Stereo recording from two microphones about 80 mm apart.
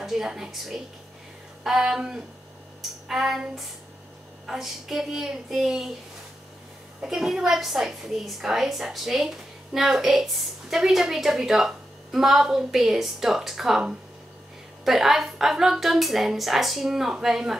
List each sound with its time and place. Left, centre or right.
0.0 s a woman's voice: centre
7.0 s a woman's voice: centre